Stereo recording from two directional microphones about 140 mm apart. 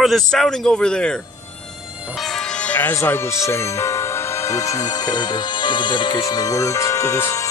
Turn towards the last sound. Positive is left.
turn(degrees=20)  # may be behind; listen again after turning